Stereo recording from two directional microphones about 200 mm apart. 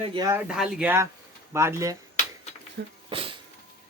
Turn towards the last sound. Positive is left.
turn(degrees=-25)  # may be behind; listen again after turning